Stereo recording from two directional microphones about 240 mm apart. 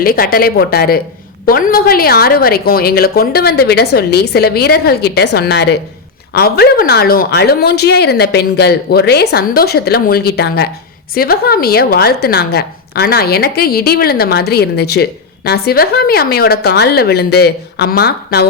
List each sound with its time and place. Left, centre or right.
0.0 s a woman's voice: left